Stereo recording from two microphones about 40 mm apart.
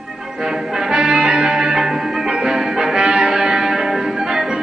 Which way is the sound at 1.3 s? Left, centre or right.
Centre.